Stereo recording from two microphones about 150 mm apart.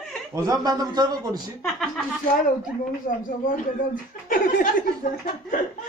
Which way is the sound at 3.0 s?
65° left (ahead or behind).